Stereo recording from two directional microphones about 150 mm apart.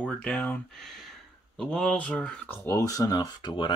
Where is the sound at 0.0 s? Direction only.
5° left (ahead or behind).